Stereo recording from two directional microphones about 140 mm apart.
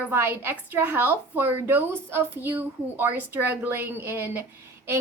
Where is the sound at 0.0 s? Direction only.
15° right (ahead or behind).